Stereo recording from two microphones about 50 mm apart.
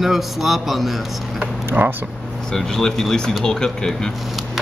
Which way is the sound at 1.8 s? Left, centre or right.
Right.